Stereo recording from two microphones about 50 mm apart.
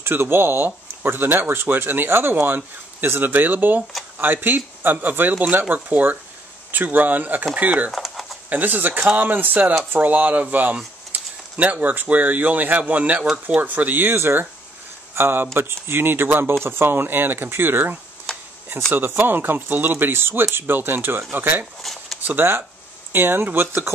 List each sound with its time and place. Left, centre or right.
0.0 s speech: right
7.9 s a sound: centre
8.5 s speech: right
14.1 s speech: right
18.3 s a sound: centre
18.9 s speech: right
21.8 s speech: centre
22.2 s speech: right